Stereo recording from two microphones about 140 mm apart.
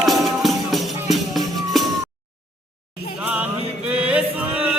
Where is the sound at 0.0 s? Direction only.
Centre (ahead or behind).